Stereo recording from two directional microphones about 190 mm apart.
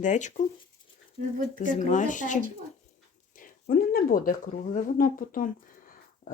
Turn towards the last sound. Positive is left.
turn(degrees=45)  # may be behind; listen again after turning